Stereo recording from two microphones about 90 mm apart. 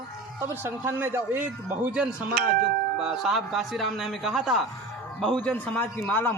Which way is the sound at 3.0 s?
5° right (ahead or behind).